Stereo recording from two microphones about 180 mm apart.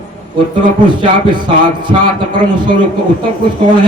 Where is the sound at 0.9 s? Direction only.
25° right (ahead or behind).